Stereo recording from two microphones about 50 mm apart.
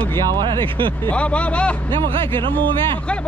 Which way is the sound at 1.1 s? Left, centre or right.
Left.